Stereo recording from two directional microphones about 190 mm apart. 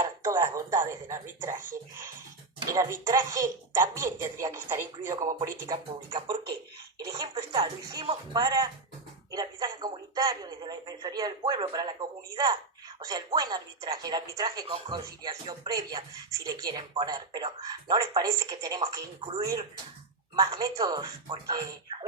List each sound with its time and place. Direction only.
0.0 s music: 15° right (ahead or behind)
2.6 s a woman's voice: 15° right (ahead or behind)